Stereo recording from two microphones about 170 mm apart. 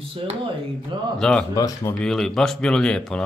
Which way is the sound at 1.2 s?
5° left (ahead or behind).